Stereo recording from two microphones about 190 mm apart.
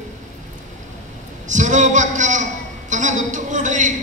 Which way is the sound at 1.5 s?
40° right (ahead or behind).